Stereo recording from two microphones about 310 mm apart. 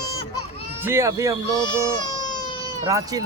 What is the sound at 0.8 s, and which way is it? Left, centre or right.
Speech, centre.